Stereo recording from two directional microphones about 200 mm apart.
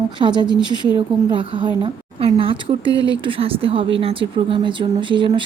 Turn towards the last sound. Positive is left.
turn(degrees=-25)  # may be behind; listen again after turning